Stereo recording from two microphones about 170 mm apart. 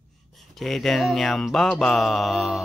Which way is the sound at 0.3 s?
Centre (ahead or behind).